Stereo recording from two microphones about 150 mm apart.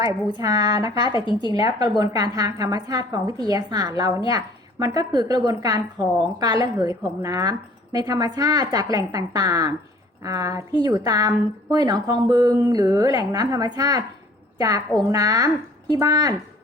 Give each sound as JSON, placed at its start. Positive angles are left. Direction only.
{"t": 0.3, "sound": "a woman's voice", "side_deg": -25}
{"t": 1.1, "sound": "speech", "side_deg": 30}
{"t": 1.5, "sound": "a woman's voice", "side_deg": -25}